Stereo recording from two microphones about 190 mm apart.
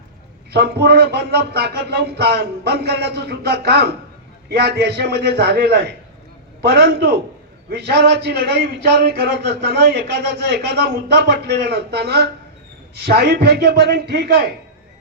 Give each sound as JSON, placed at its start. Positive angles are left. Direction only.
{"t": 0.5, "sound": "a man's voice", "side_deg": -55}